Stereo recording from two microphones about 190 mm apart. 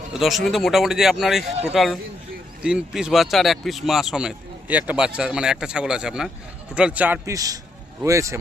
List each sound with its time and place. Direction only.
0.1 s a man's voice: centre (ahead or behind)